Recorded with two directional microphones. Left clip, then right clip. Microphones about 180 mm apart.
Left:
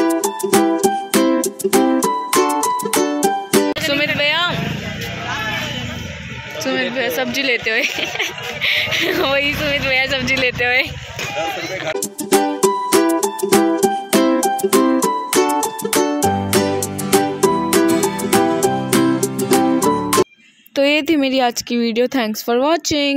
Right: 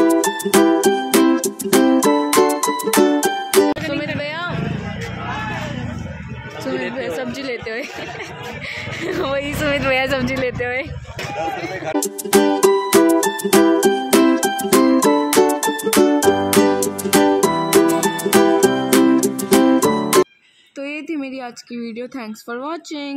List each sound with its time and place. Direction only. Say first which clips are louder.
0.1 s music: right 1 dB; centre (ahead or behind)
3.8 s music: left 6 dB; 10° left (ahead or behind)
4.2 s vehicle: left 8 dB; 5° left (ahead or behind)
6.6 s speech: left 5 dB; 5° left (ahead or behind)
9.6 s music: left 1 dB; 30° right (ahead or behind)
10.3 s speech: left 6 dB; 10° right (ahead or behind)
12.3 s music: right 1 dB; centre (ahead or behind)
20.7 s speech: left 12 dB; 45° left (ahead or behind)